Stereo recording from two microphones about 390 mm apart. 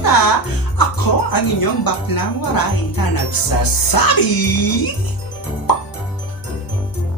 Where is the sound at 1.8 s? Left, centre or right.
Left.